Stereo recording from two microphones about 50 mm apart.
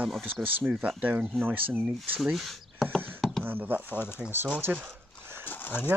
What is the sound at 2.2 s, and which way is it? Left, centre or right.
Speech, centre.